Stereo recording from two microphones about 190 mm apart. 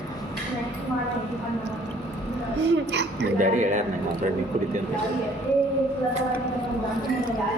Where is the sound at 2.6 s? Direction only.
65° right (ahead or behind).